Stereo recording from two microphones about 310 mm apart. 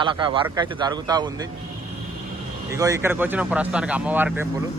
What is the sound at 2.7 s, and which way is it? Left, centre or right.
Speech, centre.